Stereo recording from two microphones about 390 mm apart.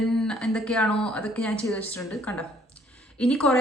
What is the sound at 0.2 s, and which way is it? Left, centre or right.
A woman's voice, centre.